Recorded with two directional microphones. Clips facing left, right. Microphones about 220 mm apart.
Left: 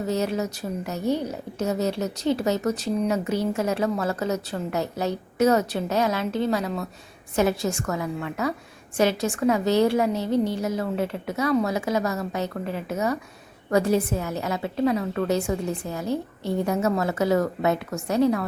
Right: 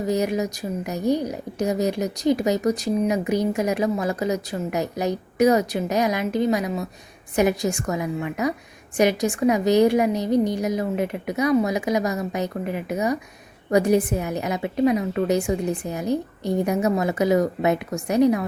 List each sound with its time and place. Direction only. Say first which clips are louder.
0.0 s a woman's voice: right 3 dB; 15° right (ahead or behind)